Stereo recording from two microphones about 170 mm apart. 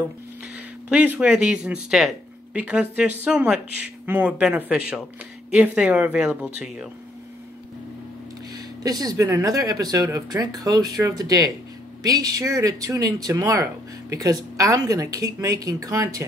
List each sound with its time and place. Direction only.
0.8 s speech: 10° right (ahead or behind)
8.8 s speech: 20° right (ahead or behind)